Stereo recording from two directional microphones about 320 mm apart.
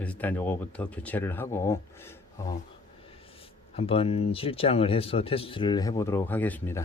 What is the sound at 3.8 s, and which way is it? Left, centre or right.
Speech, centre.